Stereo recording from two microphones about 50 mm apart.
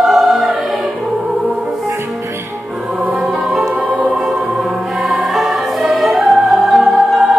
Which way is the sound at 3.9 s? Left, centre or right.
Right.